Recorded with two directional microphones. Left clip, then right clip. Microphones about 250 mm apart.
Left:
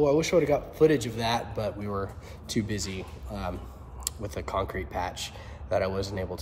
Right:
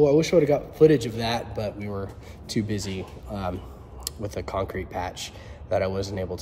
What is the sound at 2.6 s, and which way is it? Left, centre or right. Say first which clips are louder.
Speech: right 3 dB; centre.